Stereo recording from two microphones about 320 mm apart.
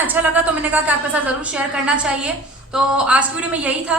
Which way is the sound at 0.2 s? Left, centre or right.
Centre.